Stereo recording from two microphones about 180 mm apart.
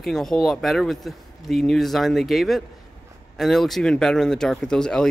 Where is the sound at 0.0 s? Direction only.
Centre (ahead or behind).